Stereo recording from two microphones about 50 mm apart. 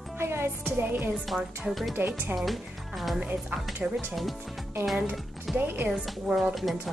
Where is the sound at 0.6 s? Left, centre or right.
Right.